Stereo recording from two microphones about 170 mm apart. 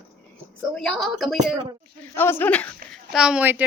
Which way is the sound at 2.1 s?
15° left (ahead or behind).